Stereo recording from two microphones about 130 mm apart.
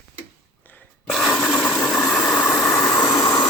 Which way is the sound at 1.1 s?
Centre (ahead or behind).